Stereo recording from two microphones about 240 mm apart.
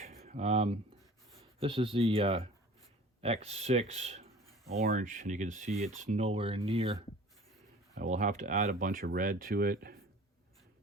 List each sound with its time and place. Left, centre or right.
0.0 s a sound: right
1.5 s speech: right
8.0 s speech: right